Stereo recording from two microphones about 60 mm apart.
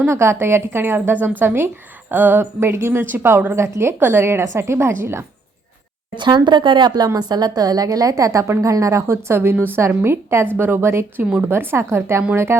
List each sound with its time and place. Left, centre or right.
0.1 s a woman's voice: right
2.4 s a woman's voice: right
6.9 s a woman's voice: right
11.2 s a woman's voice: right
11.5 s a woman's voice: right